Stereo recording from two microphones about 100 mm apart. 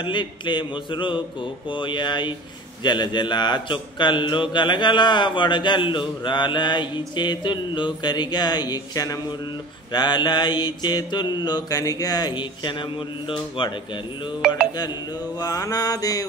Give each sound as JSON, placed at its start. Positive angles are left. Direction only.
{"t": 0.0, "sound": "speech", "side_deg": 50}
{"t": 15.3, "sound": "mantra", "side_deg": 40}